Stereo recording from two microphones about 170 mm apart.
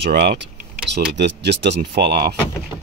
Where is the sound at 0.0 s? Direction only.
70° right (ahead or behind).